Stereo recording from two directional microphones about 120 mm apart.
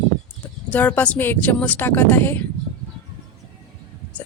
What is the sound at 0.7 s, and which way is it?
A woman's voice, 15° left (ahead or behind).